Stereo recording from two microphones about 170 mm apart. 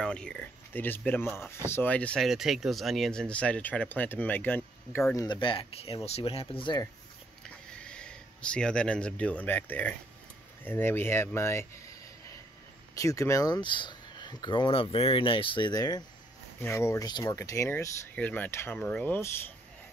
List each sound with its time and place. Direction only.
0.0 s speech: 5° left (ahead or behind); by 6.9 s 25° left (ahead or behind)
7.4 s speech: 5° left (ahead or behind)